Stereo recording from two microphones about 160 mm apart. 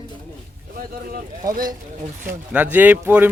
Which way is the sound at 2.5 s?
10° right (ahead or behind).